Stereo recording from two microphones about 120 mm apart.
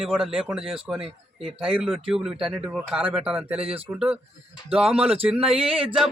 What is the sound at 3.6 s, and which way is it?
Speech, 50° right (ahead or behind).